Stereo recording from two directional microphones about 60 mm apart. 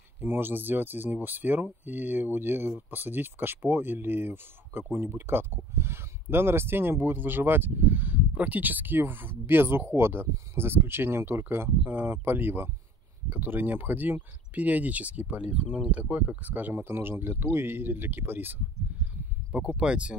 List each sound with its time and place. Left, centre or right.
0.2 s speech: right
19.8 s speech: centre